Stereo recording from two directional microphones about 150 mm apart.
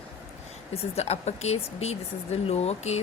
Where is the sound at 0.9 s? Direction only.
45° left (ahead or behind).